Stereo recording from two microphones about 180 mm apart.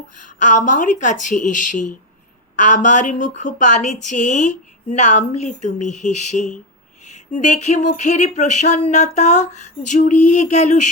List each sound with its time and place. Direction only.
0.2 s speech: 45° left (ahead or behind)